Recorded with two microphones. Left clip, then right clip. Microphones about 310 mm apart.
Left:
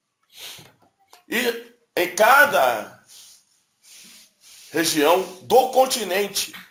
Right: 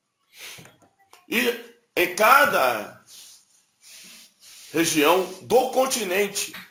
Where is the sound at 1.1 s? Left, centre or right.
Centre.